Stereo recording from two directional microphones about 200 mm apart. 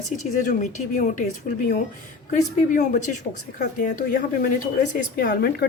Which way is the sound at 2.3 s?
40° left (ahead or behind).